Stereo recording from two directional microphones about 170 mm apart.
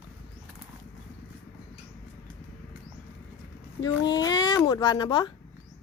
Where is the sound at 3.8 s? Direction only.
25° left (ahead or behind).